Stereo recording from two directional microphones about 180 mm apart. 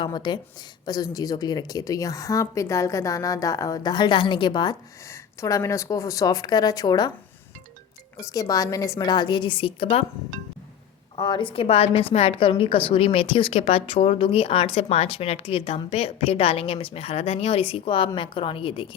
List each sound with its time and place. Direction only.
0.0 s speech: 25° left (ahead or behind)
8.2 s speech: 20° left (ahead or behind)
11.2 s speech: 25° left (ahead or behind)